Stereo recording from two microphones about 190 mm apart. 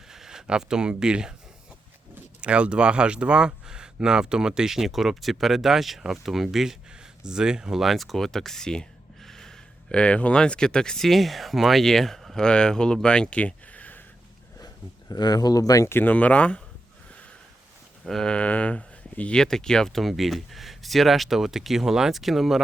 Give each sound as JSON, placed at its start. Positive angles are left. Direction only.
{"t": 0.1, "sound": "speech", "side_deg": -5}
{"t": 2.4, "sound": "speech", "side_deg": -5}
{"t": 15.1, "sound": "speech", "side_deg": 20}
{"t": 18.0, "sound": "speech", "side_deg": 0}